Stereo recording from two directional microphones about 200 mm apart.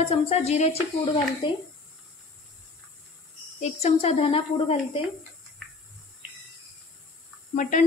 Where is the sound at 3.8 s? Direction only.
30° left (ahead or behind).